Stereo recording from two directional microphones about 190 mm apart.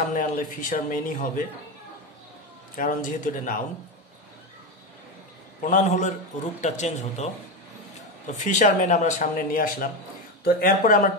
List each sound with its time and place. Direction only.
0.1 s a man's voice: 45° left (ahead or behind)
2.7 s a man's voice: 45° left (ahead or behind)
5.6 s speech: 45° left (ahead or behind)
8.5 s a man's voice: 40° left (ahead or behind)